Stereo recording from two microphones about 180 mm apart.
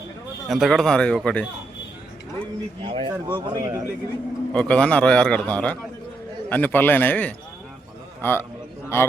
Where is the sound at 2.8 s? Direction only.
30° right (ahead or behind).